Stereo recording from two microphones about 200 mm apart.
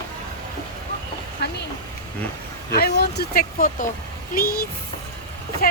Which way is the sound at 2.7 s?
50° left (ahead or behind).